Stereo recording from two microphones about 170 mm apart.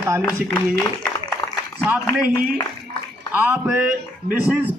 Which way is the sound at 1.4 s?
30° left (ahead or behind).